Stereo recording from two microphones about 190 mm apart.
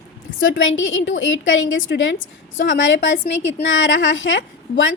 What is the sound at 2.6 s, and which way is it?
A woman's voice, 75° left (ahead or behind).